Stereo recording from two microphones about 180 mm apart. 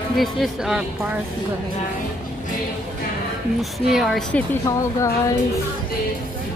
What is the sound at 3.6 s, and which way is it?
Speech, centre (ahead or behind).